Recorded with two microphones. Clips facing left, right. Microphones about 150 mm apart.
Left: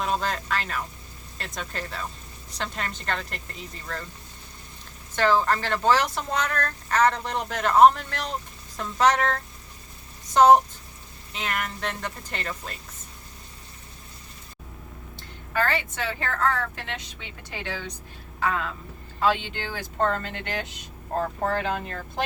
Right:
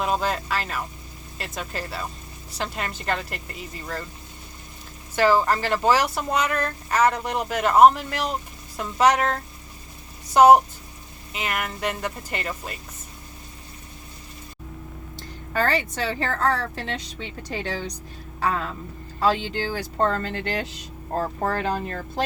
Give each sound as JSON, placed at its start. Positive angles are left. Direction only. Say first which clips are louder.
{"t": 0.0, "sound": "speech", "louder": "right 3 dB", "side_deg": -5}
{"t": 5.1, "sound": "speech", "louder": "right 2 dB", "side_deg": -10}
{"t": 15.1, "sound": "a woman's voice", "louder": "right 1 dB", "side_deg": -40}